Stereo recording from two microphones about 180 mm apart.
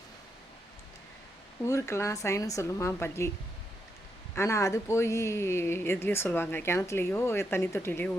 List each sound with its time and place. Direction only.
1.6 s speech: 15° left (ahead or behind)
4.4 s speech: 15° left (ahead or behind)